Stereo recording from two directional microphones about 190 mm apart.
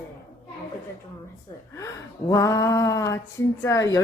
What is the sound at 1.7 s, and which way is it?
A woman's voice, 15° left (ahead or behind).